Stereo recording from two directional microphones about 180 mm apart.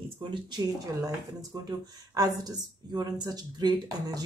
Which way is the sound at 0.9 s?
20° right (ahead or behind).